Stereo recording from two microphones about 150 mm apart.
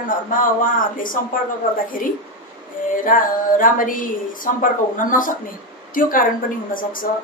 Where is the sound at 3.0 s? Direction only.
65° left (ahead or behind).